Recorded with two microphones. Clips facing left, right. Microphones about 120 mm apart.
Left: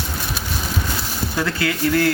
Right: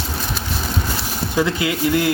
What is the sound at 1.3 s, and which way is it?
Speech, 20° right (ahead or behind).